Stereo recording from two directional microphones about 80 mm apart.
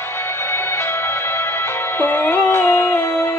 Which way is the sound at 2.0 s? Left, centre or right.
Left.